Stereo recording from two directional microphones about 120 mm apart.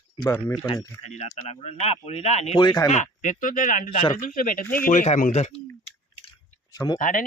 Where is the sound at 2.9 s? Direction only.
85° left.